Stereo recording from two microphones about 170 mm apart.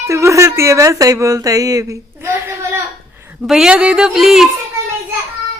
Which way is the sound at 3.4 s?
5° right (ahead or behind).